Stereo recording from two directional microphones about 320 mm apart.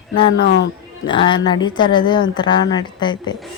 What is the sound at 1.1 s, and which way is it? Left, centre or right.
Speech, centre.